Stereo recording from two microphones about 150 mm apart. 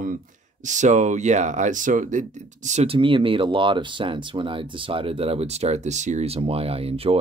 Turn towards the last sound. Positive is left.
turn(degrees=-40)  # may be behind; listen again after turning